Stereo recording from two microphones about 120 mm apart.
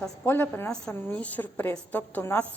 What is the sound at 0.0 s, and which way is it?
A woman's voice, 15° left (ahead or behind).